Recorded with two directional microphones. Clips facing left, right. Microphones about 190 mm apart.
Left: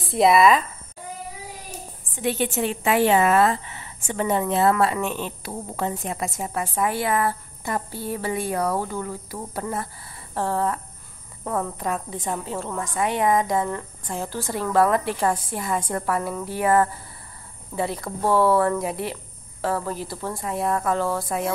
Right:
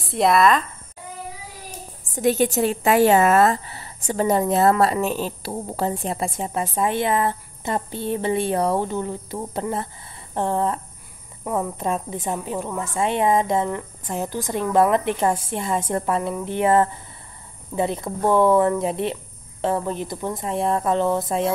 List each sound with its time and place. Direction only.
0.1 s speech: centre (ahead or behind)
2.1 s a woman's voice: 40° right (ahead or behind); by 11.7 s 10° right (ahead or behind)
11.8 s a woman's voice: 25° right (ahead or behind)